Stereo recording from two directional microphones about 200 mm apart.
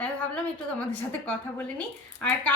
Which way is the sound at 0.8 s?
5° left (ahead or behind).